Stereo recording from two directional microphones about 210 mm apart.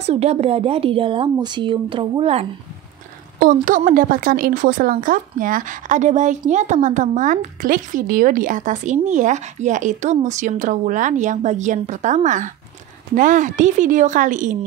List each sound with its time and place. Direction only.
0.0 s speech: 30° right (ahead or behind)
3.3 s a woman's voice: 40° right (ahead or behind)